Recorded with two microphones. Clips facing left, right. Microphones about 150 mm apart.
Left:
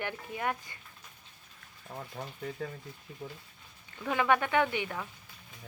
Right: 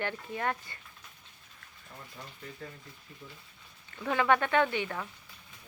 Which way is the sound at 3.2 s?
60° left (ahead or behind).